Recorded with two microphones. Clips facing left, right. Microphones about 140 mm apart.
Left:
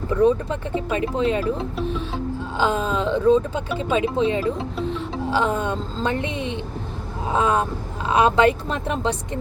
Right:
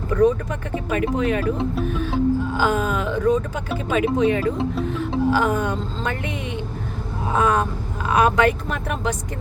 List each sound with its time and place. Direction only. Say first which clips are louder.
0.1 s speech: even; 25° left (ahead or behind)